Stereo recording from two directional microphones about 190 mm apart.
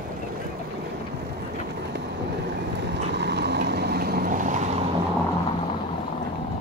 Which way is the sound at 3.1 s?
60° right (ahead or behind).